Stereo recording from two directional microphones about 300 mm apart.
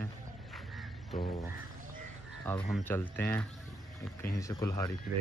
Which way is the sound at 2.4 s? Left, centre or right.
Centre.